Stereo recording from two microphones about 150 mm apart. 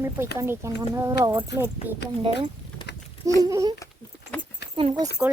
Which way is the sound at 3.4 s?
25° right (ahead or behind).